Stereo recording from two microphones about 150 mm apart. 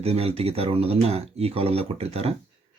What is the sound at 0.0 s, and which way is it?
Speech, 40° right (ahead or behind).